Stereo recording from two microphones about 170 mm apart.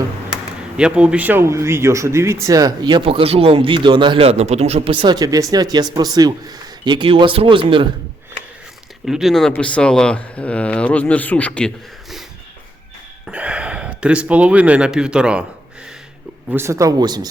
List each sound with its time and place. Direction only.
0.8 s speech: 5° right (ahead or behind); by 4.9 s 40° right (ahead or behind)
5.0 s speech: 20° right (ahead or behind)
9.0 s speech: centre (ahead or behind)
13.2 s speech: 5° right (ahead or behind)
16.5 s speech: 15° right (ahead or behind)